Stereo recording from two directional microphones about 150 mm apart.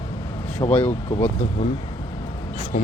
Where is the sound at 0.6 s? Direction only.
25° left (ahead or behind).